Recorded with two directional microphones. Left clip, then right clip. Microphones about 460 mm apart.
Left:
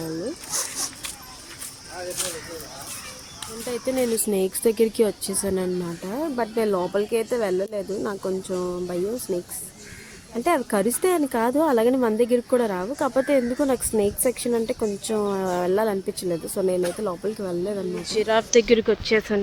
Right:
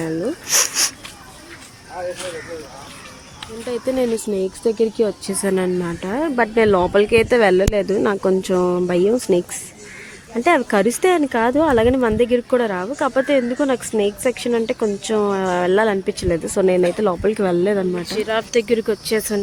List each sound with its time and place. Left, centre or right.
3.7 s speech: left
18.0 s speech: left